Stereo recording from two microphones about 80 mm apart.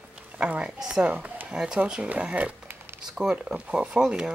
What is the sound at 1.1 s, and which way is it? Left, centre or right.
Speech, right.